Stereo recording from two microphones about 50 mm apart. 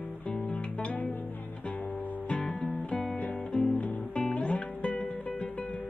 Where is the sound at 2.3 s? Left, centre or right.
Left.